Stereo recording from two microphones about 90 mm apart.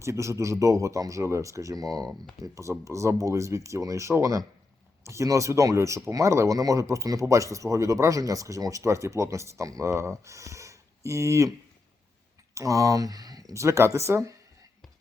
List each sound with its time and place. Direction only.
0.0 s speech: 30° right (ahead or behind)
12.5 s speech: 40° right (ahead or behind)